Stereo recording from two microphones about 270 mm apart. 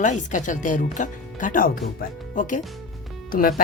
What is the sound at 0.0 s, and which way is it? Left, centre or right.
A woman's voice, left.